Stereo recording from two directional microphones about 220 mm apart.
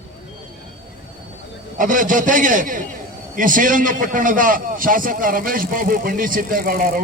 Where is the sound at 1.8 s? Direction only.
35° right (ahead or behind).